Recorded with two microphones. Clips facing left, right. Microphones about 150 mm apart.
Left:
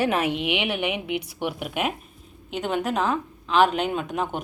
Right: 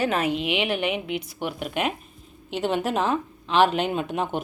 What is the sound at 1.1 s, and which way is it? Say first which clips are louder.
Speech: left 1 dB; 65° left (ahead or behind).